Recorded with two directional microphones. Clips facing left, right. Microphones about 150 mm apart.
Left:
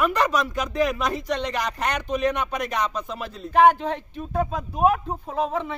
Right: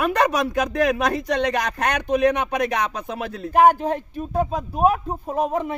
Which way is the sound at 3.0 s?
60° right (ahead or behind).